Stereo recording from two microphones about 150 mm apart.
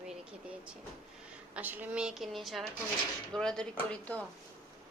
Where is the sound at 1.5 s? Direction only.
10° right (ahead or behind); by 4.2 s 10° left (ahead or behind).